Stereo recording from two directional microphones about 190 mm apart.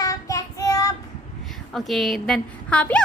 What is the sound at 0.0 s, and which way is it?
Child singing, 20° left (ahead or behind).